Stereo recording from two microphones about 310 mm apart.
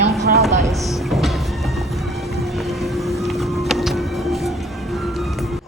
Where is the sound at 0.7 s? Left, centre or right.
Centre.